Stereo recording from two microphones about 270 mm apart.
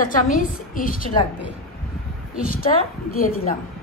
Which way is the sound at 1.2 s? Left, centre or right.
Centre.